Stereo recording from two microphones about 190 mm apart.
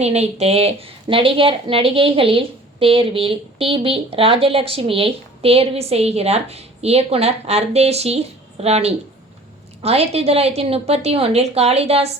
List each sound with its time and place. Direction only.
0.0 s a woman's voice: 35° right (ahead or behind)